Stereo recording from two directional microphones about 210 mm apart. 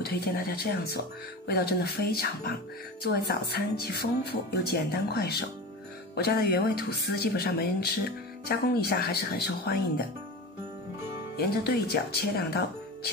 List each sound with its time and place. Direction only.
0.0 s speech: 50° left (ahead or behind)
11.3 s speech: 50° left (ahead or behind)